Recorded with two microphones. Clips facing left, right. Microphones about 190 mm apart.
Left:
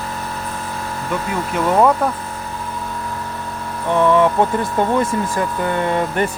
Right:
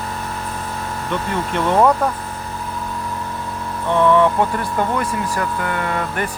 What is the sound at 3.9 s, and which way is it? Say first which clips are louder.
Speech: even; 15° left (ahead or behind).